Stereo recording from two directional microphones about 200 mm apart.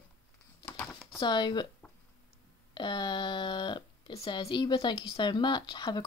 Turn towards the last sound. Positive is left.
turn(degrees=20)  # may be behind; listen again after turning